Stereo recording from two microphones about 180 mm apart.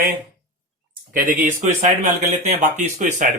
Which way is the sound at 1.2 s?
45° right (ahead or behind).